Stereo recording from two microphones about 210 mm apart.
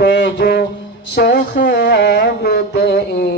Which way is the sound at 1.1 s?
50° left (ahead or behind).